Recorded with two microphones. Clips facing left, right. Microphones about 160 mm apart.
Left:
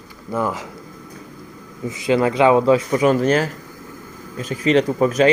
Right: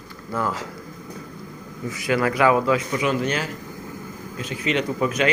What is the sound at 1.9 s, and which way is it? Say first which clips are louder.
A man's voice: left 5 dB; 25° left (ahead or behind).